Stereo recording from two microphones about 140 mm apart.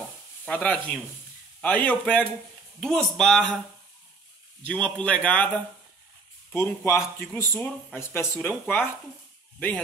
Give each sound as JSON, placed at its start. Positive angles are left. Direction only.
{"t": 0.5, "sound": "speech", "side_deg": 10}
{"t": 4.6, "sound": "speech", "side_deg": 10}
{"t": 6.5, "sound": "speech", "side_deg": 20}